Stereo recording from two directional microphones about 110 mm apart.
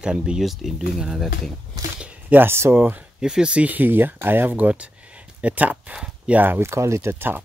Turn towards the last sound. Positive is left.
turn(degrees=-20)  # may be behind; listen again after turning